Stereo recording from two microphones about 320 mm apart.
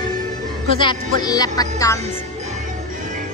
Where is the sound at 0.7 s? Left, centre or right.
Centre.